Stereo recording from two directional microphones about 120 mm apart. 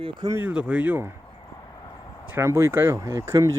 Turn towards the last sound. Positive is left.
turn(degrees=-25)  # may be behind; listen again after turning